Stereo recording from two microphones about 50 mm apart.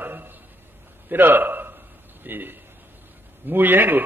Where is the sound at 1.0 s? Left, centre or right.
Right.